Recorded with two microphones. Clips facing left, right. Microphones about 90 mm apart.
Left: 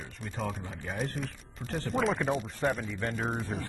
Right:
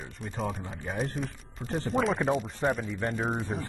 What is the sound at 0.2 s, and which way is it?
Speech, centre (ahead or behind).